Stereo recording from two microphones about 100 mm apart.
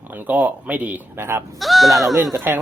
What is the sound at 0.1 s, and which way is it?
Speech, 15° right (ahead or behind).